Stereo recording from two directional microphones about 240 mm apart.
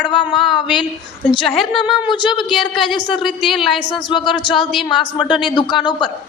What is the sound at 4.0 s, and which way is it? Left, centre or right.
A man's voice, centre.